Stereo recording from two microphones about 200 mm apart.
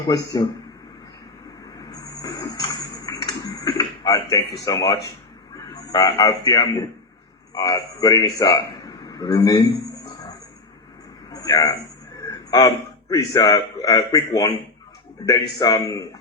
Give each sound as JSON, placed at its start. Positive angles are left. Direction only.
{"t": 1.8, "sound": "a sound", "side_deg": 15}
{"t": 5.5, "sound": "a man's voice", "side_deg": 20}
{"t": 11.3, "sound": "a man's voice", "side_deg": 20}